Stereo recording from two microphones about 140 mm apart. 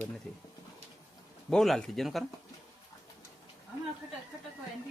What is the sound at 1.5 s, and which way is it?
Speech, 5° left (ahead or behind).